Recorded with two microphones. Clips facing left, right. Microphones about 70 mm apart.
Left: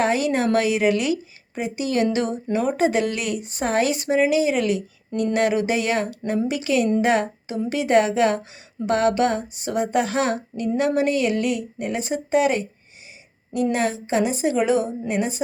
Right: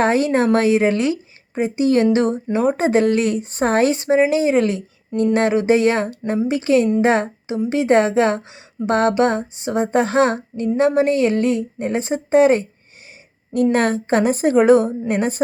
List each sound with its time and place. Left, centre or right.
0.0 s speech: right
7.0 s a sound: right
7.7 s a woman's voice: right
13.5 s a woman's voice: right